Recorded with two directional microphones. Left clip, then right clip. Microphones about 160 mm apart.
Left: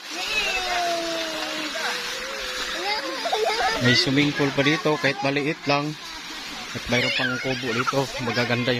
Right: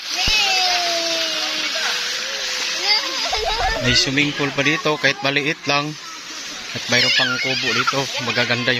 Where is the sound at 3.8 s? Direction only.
30° left (ahead or behind).